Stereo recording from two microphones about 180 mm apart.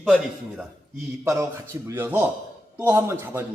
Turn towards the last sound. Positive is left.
turn(degrees=-15)  # may be behind; listen again after turning